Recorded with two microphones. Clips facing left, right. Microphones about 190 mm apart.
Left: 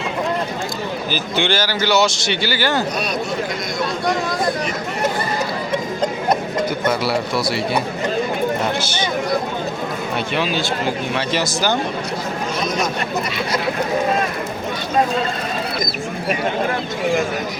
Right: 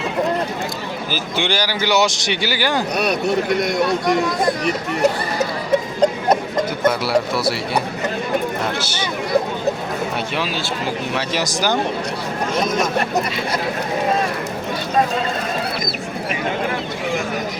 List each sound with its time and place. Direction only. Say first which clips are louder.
1.1 s speech: left 1 dB; 10° right (ahead or behind)
3.0 s speech: right 4 dB; 65° right (ahead or behind)
7.0 s speech: right 2 dB; 5° right (ahead or behind)
8.8 s speech: left 2 dB; 5° right (ahead or behind)
10.3 s speech: left 3 dB; 5° right (ahead or behind)